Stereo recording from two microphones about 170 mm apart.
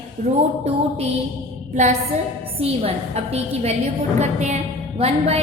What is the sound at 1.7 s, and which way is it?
A woman's voice, 45° right (ahead or behind).